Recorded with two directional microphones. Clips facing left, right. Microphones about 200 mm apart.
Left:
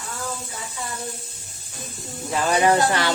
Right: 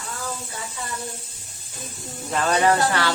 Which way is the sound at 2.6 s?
20° left (ahead or behind).